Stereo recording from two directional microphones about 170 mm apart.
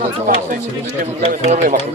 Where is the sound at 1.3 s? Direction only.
45° right (ahead or behind).